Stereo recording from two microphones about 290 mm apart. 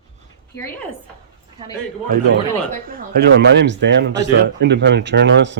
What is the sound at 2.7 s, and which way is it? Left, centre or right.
Speech, right.